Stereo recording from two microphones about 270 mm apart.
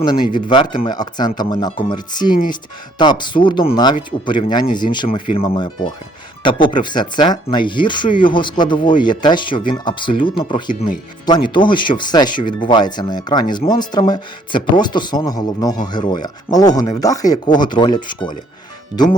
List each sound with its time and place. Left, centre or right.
0.0 s speech: centre